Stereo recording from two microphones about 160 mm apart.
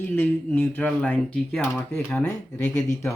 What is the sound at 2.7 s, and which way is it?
Speech, 20° left (ahead or behind).